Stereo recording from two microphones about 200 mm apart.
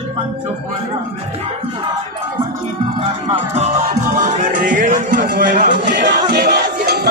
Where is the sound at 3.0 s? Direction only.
30° right (ahead or behind).